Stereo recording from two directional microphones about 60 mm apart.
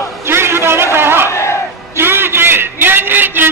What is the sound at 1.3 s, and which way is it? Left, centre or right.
Crowd, left.